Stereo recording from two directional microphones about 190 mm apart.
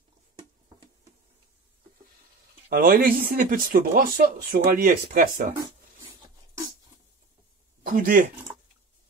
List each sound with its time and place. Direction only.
2.7 s speech: 50° right (ahead or behind)
7.8 s speech: 45° right (ahead or behind)